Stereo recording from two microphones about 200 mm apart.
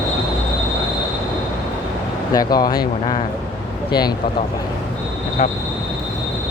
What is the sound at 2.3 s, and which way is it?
Speech, 20° left (ahead or behind).